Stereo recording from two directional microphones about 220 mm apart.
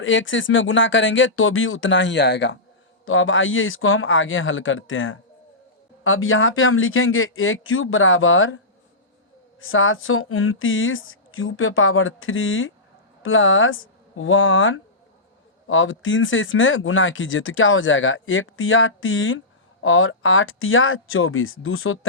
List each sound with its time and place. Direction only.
0.0 s speech: 60° left (ahead or behind)